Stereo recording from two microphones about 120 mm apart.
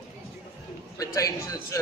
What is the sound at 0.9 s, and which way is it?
Speech, 30° left (ahead or behind).